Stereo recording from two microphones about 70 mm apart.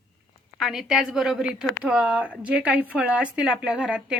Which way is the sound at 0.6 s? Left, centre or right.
Centre.